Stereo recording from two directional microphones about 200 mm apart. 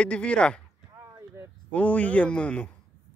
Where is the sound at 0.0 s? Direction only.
5° left (ahead or behind).